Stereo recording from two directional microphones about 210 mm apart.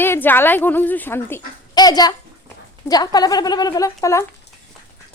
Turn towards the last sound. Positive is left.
turn(degrees=15)  # may be behind; listen again after turning